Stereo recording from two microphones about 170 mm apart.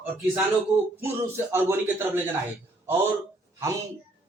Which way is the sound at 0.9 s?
15° right (ahead or behind).